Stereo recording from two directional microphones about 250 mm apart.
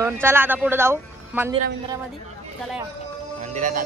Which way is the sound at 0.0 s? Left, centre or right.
Centre.